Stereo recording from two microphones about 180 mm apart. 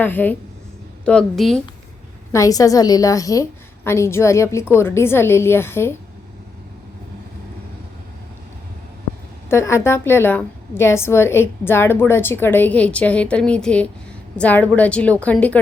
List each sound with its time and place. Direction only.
0.0 s a woman's voice: 10° left (ahead or behind)
2.3 s a woman's voice: 20° left (ahead or behind)
9.5 s a woman's voice: 15° left (ahead or behind)